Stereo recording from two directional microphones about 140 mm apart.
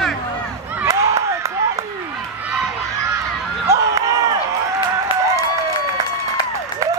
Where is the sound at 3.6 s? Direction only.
20° right (ahead or behind).